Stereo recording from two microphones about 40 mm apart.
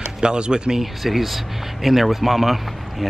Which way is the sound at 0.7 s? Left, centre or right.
Centre.